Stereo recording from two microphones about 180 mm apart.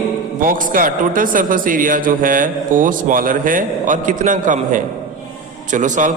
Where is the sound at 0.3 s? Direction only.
50° right (ahead or behind).